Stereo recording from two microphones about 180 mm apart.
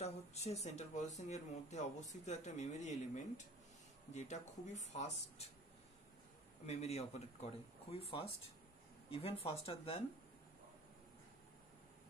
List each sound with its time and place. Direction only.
0.0 s speech: 35° left (ahead or behind)
6.6 s speech: 35° left (ahead or behind)